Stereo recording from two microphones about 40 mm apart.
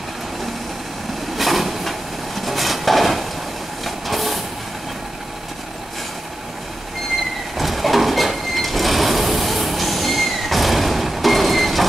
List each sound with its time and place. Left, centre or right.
1.3 s vehicle: centre
2.4 s a sound: centre
3.8 s train: centre
7.5 s vehicle: centre